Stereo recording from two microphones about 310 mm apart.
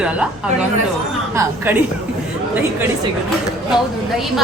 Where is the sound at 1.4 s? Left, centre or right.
Centre.